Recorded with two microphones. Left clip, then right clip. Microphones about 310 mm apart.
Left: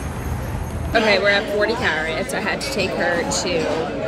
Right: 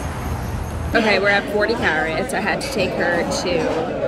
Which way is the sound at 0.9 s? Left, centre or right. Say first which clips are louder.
Even; centre.